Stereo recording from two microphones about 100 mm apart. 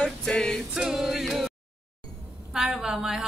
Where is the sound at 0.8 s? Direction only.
5° right (ahead or behind).